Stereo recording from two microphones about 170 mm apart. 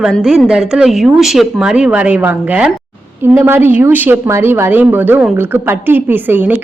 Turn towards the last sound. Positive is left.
turn(degrees=-10)  # may be behind; listen again after turning